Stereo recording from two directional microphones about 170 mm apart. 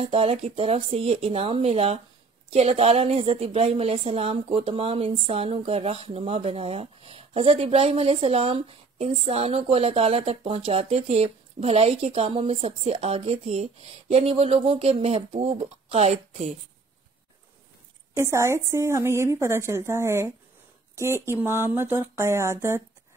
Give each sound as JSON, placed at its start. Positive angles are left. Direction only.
{"t": 0.0, "sound": "a woman's voice", "side_deg": -35}
{"t": 18.1, "sound": "a woman's voice", "side_deg": -15}